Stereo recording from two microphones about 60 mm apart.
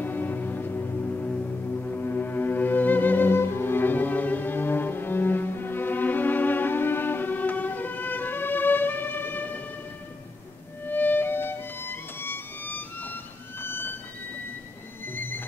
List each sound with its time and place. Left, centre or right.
0.0 s music: left
10.9 s music: left
15.1 s music: left